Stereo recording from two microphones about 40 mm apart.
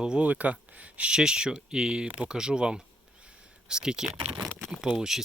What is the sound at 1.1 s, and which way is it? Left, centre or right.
Speech, right.